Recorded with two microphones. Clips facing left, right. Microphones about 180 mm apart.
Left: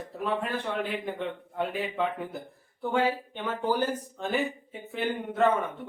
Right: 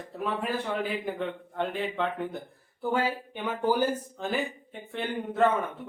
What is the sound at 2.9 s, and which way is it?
Speech, 10° right (ahead or behind).